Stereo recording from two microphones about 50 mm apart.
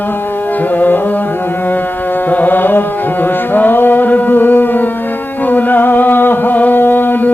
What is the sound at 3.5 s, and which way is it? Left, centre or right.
Carnatic music, left.